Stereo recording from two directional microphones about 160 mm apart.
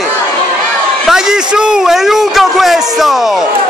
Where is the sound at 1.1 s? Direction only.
5° right (ahead or behind).